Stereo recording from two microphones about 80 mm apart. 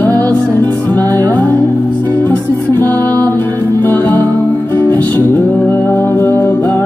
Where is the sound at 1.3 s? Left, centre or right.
Left.